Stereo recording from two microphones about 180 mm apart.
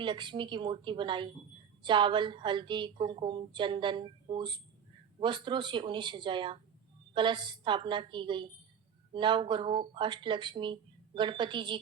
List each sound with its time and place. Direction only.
0.0 s a woman's voice: 25° right (ahead or behind)